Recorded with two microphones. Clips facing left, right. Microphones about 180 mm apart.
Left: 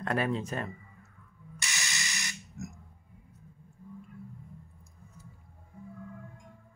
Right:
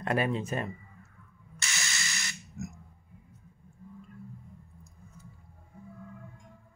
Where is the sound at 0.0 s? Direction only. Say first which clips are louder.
Right 1 dB; 5° right (ahead or behind).